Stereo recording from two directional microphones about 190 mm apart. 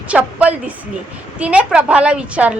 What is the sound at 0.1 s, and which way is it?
A woman's voice, 5° right (ahead or behind).